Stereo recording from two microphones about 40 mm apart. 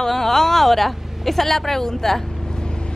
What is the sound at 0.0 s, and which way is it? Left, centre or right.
A woman's voice, centre.